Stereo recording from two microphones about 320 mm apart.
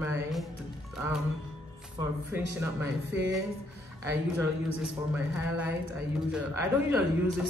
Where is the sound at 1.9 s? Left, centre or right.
Centre.